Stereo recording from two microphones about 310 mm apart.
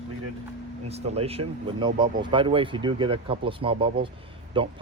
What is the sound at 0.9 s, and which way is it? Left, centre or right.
Speech, centre.